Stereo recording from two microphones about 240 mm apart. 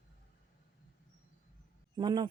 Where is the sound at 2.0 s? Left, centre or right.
Centre.